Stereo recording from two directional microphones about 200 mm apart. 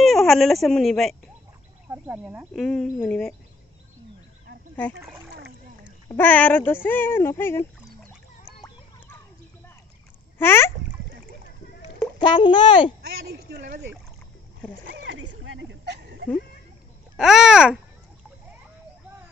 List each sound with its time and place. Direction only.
0.0 s speech: centre (ahead or behind)
1.9 s speech: 10° right (ahead or behind)
6.0 s speech: 10° left (ahead or behind)
10.4 s speech: 10° left (ahead or behind)
12.2 s a child's voice: 25° left (ahead or behind)
13.2 s speech: 50° right (ahead or behind)
14.9 s a sound: 70° right (ahead or behind)
17.2 s speech: 5° right (ahead or behind)